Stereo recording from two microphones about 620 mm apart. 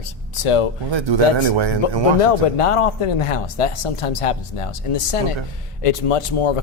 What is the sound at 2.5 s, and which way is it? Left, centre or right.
Speech, left.